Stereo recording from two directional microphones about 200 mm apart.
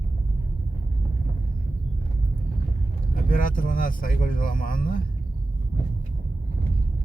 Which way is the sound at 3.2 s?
45° left (ahead or behind).